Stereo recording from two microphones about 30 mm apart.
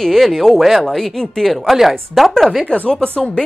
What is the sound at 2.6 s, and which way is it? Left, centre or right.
Speech, left.